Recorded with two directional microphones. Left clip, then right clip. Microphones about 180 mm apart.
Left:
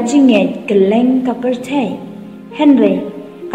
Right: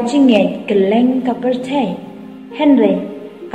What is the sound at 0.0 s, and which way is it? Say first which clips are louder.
A woman's voice: left 1 dB; 30° left (ahead or behind).